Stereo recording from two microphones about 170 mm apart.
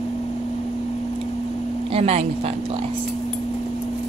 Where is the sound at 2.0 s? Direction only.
40° right (ahead or behind).